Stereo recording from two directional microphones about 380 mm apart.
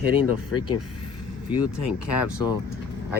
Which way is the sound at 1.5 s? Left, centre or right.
Left.